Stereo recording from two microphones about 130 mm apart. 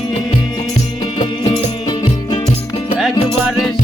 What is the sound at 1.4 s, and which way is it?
Music, 40° left (ahead or behind).